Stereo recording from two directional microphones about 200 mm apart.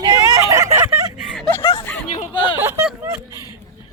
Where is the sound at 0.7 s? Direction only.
10° right (ahead or behind).